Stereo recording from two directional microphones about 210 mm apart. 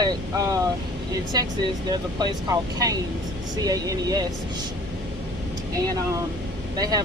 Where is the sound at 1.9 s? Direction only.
20° right (ahead or behind).